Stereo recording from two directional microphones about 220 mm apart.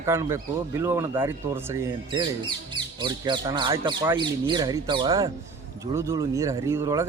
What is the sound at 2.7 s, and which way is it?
Speech, 20° right (ahead or behind).